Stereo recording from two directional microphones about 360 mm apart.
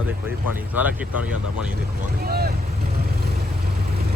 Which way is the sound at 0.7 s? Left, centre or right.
Centre.